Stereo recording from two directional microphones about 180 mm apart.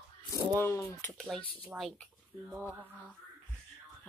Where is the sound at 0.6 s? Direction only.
15° left (ahead or behind).